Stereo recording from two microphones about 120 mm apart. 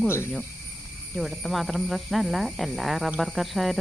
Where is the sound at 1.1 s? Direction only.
Centre (ahead or behind).